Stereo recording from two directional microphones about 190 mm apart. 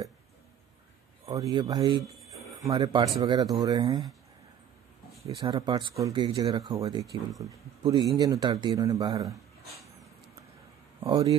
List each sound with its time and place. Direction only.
1.3 s speech: 20° right (ahead or behind)
5.2 s speech: 25° right (ahead or behind)
11.1 s speech: 20° right (ahead or behind)